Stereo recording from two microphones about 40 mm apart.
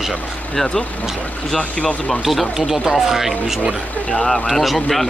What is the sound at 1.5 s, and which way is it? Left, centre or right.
Speech, left.